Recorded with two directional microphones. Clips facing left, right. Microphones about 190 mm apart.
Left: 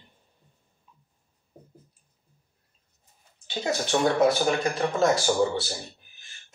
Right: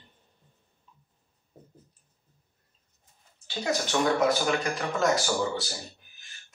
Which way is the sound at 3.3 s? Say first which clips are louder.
Left 1 dB; 25° left (ahead or behind).